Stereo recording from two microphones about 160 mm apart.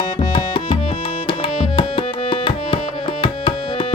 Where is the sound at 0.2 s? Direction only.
30° left (ahead or behind).